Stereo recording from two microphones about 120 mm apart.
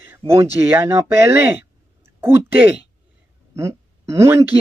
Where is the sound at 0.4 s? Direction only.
20° right (ahead or behind).